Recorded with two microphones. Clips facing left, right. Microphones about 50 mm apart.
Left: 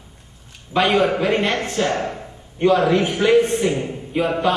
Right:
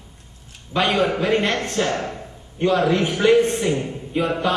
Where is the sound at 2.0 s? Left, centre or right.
Centre.